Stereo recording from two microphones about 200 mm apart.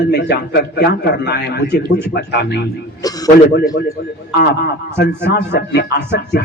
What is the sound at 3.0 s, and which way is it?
Speech, 20° left (ahead or behind).